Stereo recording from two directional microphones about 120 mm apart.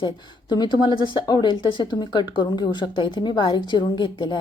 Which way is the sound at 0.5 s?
40° left (ahead or behind).